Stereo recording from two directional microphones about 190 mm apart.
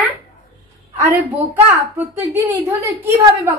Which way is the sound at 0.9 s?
10° right (ahead or behind).